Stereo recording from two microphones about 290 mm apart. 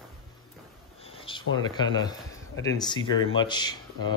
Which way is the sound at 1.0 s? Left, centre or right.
Centre.